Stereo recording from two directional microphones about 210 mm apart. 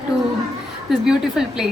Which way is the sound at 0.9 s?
Centre (ahead or behind).